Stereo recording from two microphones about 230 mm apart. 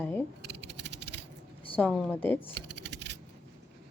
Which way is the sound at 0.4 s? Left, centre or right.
Right.